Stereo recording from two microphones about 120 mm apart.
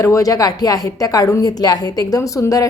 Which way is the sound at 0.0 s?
30° left (ahead or behind).